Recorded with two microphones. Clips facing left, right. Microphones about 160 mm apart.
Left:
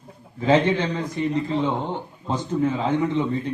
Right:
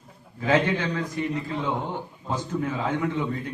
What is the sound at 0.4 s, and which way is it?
A man's voice, 20° left (ahead or behind).